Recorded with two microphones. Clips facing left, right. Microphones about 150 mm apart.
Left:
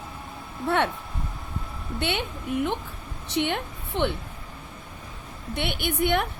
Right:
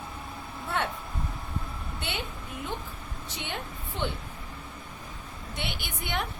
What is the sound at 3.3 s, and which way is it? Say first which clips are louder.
Speech: left 11 dB; 65° left (ahead or behind).